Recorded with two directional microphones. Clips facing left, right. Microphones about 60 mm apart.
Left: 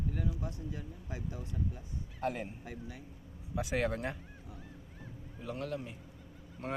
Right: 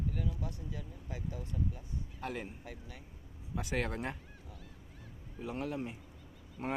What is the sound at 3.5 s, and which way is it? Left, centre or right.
Speech, centre.